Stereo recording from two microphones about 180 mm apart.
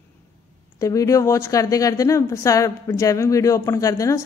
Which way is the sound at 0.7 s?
20° left (ahead or behind).